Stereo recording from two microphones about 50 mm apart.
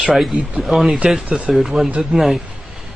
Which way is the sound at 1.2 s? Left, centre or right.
Centre.